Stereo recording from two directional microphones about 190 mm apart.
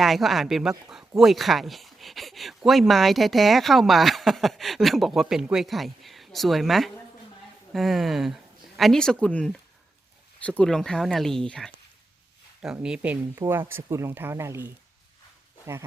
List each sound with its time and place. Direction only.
0.0 s speech: centre (ahead or behind)
10.6 s speech: 5° left (ahead or behind); by 14.7 s 15° right (ahead or behind)